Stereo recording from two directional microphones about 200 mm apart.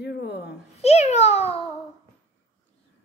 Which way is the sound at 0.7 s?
30° left (ahead or behind).